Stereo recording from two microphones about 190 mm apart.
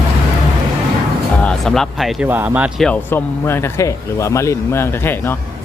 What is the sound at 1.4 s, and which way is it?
Speech, centre (ahead or behind).